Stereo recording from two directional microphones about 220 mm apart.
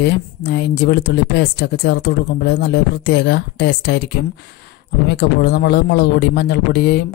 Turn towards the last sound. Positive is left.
turn(degrees=50)  # may be behind; listen again after turning